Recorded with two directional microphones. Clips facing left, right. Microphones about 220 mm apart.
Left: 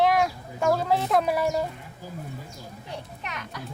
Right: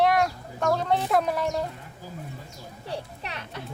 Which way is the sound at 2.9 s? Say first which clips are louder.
Right 3 dB; 30° right (ahead or behind).